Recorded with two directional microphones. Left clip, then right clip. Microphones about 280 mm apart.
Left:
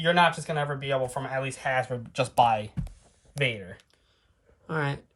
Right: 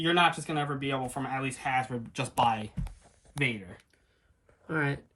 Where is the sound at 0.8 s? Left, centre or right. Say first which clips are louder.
Left 4 dB; left.